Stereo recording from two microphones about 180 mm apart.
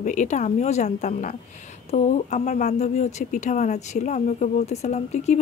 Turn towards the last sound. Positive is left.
turn(degrees=40)  # may be behind; listen again after turning